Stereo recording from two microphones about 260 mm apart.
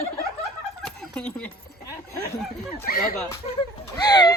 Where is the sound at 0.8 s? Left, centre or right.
Centre.